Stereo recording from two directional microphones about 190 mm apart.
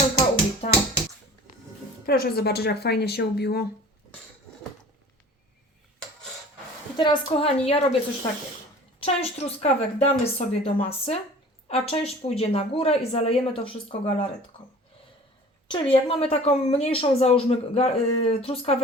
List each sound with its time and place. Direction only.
0.6 s a sound: 35° left (ahead or behind)
2.0 s speech: 55° left (ahead or behind)
6.9 s a woman's voice: 25° left (ahead or behind)
9.0 s a woman's voice: 30° left (ahead or behind)
15.6 s a woman's voice: 25° left (ahead or behind)